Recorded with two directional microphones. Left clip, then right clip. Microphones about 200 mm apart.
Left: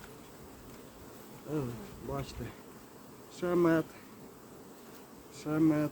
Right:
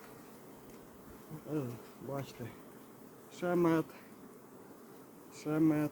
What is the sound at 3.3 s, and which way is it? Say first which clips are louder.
Speech: left 3 dB; 20° right (ahead or behind).